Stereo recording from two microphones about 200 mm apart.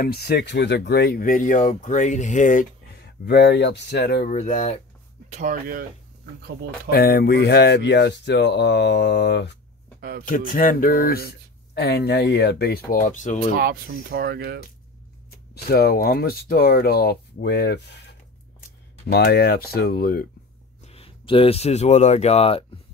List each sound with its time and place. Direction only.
0.0 s speech: 50° left (ahead or behind)
4.3 s speech: 40° left (ahead or behind)
5.3 s speech: 40° right (ahead or behind)
6.9 s speech: 50° left (ahead or behind)
9.9 s a sound: 50° right (ahead or behind)
10.2 s speech: 40° left (ahead or behind)
13.6 s speech: 50° right (ahead or behind)
15.5 s speech: 50° left (ahead or behind)
20.8 s speech: 30° left (ahead or behind)